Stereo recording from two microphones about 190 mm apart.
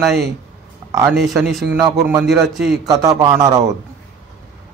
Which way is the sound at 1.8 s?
15° right (ahead or behind).